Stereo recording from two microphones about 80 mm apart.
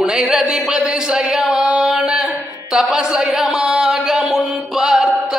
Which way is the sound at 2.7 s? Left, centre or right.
Centre.